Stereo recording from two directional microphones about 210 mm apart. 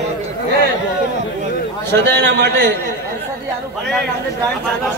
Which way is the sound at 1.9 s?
55° right (ahead or behind).